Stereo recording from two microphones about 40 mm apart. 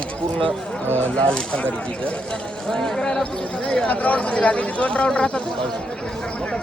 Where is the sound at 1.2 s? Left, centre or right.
Left.